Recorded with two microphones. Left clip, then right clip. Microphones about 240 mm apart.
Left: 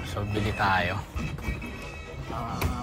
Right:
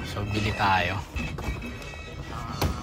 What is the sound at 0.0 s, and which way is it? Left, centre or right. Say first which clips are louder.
Speech: right 1 dB; centre.